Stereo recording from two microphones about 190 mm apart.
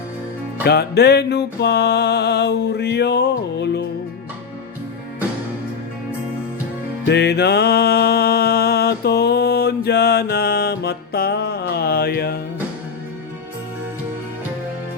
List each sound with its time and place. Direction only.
0.6 s music: 60° left (ahead or behind)
7.0 s music: 60° left (ahead or behind)